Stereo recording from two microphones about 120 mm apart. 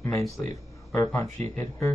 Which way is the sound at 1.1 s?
20° left (ahead or behind).